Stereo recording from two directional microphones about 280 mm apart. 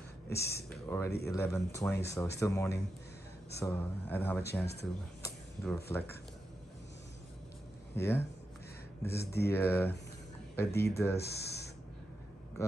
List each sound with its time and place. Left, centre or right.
0.3 s speech: centre
5.2 s a sound: centre
7.9 s speech: centre
9.2 s speech: left
9.5 s speech: centre
11.1 s speech: left
12.6 s speech: centre